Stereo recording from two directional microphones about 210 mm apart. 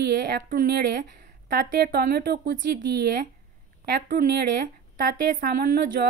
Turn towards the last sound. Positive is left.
turn(degrees=-40)  # may be behind; listen again after turning